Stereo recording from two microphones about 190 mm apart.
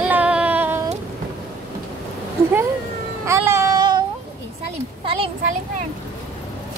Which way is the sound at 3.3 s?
15° right (ahead or behind).